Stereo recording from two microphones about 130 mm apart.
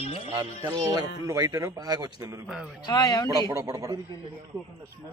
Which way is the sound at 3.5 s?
25° right (ahead or behind).